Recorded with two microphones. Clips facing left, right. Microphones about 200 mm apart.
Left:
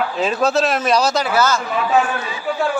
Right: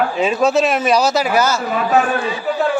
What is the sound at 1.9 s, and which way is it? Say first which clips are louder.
Speech: right 2 dB; 40° right (ahead or behind).